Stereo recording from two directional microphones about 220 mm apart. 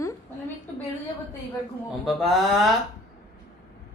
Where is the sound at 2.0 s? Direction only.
Centre (ahead or behind).